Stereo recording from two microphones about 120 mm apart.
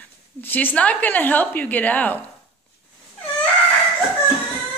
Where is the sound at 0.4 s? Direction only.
15° left (ahead or behind).